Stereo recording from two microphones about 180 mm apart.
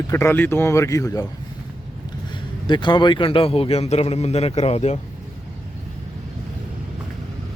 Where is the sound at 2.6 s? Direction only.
25° left (ahead or behind).